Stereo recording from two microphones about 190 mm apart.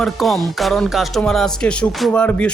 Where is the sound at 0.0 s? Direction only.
Centre (ahead or behind).